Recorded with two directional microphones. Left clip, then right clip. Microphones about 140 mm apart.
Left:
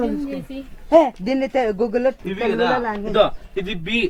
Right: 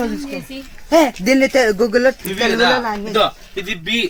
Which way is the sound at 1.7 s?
60° right (ahead or behind).